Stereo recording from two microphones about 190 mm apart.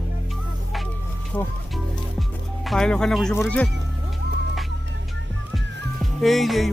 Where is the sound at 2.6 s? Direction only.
5° left (ahead or behind).